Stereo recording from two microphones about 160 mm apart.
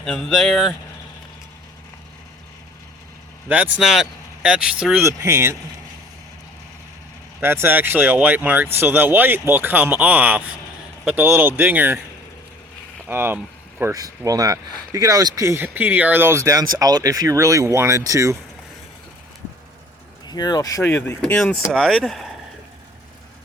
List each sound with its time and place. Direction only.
0.0 s speech: 5° left (ahead or behind)
3.5 s speech: 10° right (ahead or behind)
5.0 s speech: 15° right (ahead or behind)
7.4 s speech: 15° right (ahead or behind)
13.1 s speech: 15° right (ahead or behind)
20.2 s speech: 25° left (ahead or behind); by 22.2 s centre (ahead or behind)